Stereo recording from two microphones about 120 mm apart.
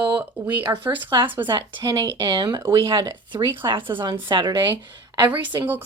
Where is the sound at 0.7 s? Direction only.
25° right (ahead or behind).